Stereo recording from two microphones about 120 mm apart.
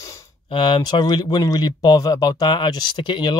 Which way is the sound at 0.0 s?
25° left (ahead or behind).